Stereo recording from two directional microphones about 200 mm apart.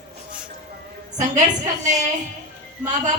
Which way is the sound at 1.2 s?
35° right (ahead or behind).